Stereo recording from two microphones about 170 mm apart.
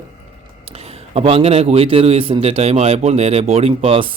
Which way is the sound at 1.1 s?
35° right (ahead or behind).